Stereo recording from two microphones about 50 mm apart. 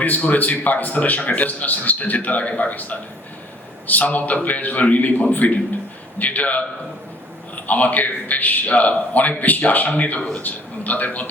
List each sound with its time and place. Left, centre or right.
0.0 s a man's voice: left